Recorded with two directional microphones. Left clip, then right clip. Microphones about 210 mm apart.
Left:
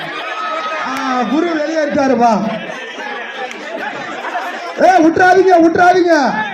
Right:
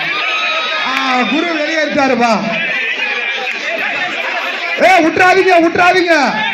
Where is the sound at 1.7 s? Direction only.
60° left (ahead or behind).